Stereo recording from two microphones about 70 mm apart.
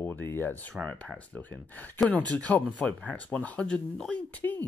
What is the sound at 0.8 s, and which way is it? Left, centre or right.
Speech, centre.